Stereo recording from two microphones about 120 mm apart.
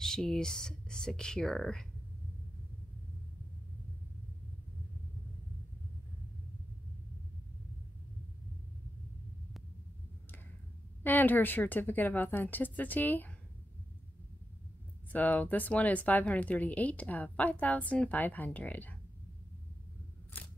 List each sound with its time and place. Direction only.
0.0 s speech: 5° left (ahead or behind)
11.0 s speech: 15° left (ahead or behind)
15.1 s speech: 15° left (ahead or behind)